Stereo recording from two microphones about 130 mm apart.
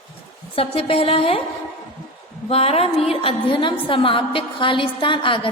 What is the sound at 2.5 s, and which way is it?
A woman's voice, 50° left (ahead or behind).